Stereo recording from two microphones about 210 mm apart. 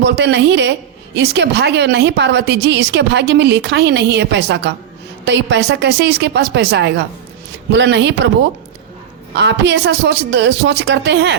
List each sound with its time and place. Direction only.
0.0 s a woman's voice: 55° right (ahead or behind)
9.3 s a woman's voice: 55° right (ahead or behind)